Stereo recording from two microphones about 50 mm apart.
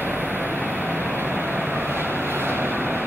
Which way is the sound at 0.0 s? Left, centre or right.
Right.